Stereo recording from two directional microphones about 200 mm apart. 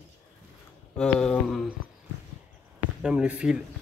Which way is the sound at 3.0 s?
5° right (ahead or behind).